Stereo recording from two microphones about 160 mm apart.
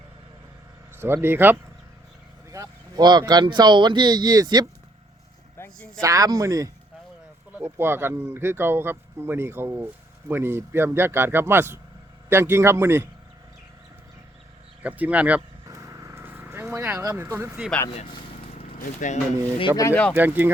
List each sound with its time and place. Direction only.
0.9 s speech: 15° right (ahead or behind)
5.5 s vehicle: 15° left (ahead or behind)
6.0 s speech: 20° right (ahead or behind)
14.8 s speech: 10° right (ahead or behind)
15.4 s vehicle: 20° right (ahead or behind)
17.0 s speech: 20° right (ahead or behind)
18.8 s speech: 50° left (ahead or behind)
19.7 s speech: 20° left (ahead or behind)
20.1 s speech: 10° right (ahead or behind)